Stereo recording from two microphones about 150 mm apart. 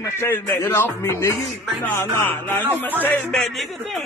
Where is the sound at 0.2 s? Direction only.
15° left (ahead or behind).